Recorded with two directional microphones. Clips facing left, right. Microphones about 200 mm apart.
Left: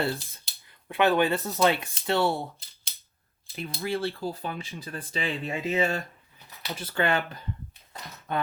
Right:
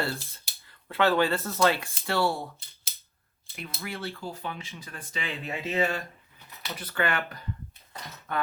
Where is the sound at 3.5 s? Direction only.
30° left (ahead or behind).